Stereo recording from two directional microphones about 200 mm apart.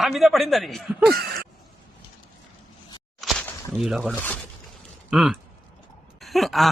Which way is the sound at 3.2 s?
Centre (ahead or behind).